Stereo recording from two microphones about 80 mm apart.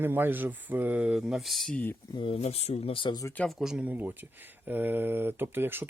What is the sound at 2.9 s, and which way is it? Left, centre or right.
Speech, left.